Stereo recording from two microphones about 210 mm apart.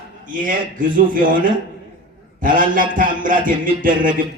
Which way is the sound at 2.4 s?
40° right (ahead or behind).